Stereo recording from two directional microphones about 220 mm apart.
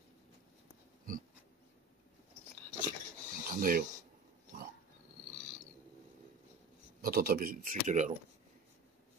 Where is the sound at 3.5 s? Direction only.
40° right (ahead or behind).